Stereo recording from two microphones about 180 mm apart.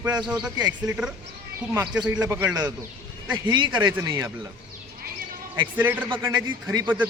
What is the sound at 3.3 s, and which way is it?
Speech, 25° right (ahead or behind).